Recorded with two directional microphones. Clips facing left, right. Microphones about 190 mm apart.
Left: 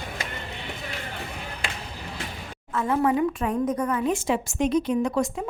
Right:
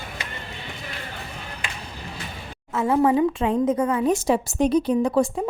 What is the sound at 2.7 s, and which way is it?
A woman's voice, 25° right (ahead or behind).